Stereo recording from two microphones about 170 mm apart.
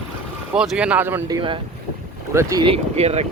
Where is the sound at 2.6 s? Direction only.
35° right (ahead or behind).